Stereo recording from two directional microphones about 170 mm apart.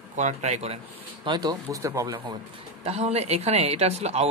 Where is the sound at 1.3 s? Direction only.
25° right (ahead or behind).